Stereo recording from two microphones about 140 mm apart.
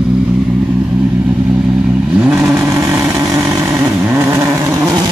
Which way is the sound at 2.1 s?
10° right (ahead or behind).